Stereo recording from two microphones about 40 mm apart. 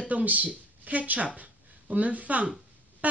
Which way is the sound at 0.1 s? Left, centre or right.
Right.